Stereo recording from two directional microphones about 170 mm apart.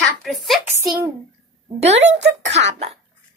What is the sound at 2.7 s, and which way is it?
Speech, 40° right (ahead or behind).